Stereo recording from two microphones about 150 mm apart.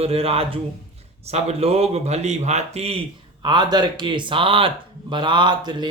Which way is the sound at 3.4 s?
30° right (ahead or behind).